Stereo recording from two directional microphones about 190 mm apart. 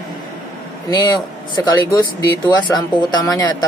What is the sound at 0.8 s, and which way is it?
Speech, 20° left (ahead or behind).